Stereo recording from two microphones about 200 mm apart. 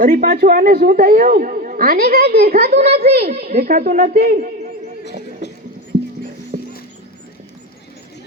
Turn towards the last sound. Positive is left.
turn(degrees=-45)  # may be behind; listen again after turning